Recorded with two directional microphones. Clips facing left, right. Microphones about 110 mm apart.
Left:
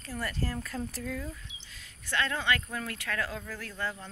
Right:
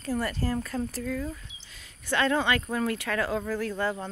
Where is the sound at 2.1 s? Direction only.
25° right (ahead or behind).